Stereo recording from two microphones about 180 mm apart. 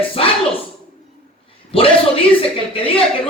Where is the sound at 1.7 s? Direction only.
30° left (ahead or behind).